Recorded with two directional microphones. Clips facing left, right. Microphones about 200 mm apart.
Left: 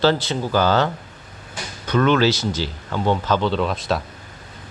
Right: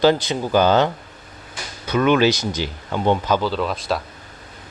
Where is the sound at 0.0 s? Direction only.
15° right (ahead or behind).